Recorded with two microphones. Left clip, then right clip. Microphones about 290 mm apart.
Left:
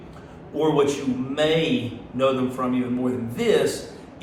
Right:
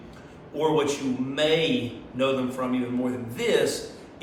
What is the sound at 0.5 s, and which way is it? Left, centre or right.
A man's voice, centre.